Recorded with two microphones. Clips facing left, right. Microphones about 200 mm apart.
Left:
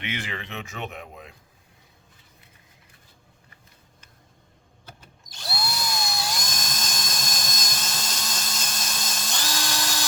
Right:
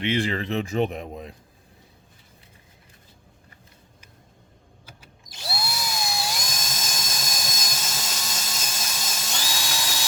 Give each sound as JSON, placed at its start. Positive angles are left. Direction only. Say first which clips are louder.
{"t": 0.0, "sound": "speech", "louder": "right 9 dB", "side_deg": -35}
{"t": 4.9, "sound": "drill", "louder": "right 2 dB", "side_deg": -5}